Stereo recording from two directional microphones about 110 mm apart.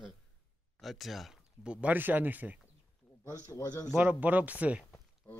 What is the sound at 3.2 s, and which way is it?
Speech, 30° left (ahead or behind).